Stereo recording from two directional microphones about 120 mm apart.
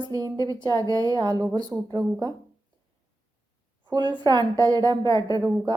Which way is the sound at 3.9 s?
35° right (ahead or behind).